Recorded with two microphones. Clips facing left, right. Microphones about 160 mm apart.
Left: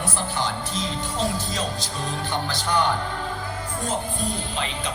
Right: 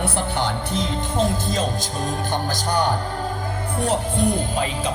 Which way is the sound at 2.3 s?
45° right (ahead or behind).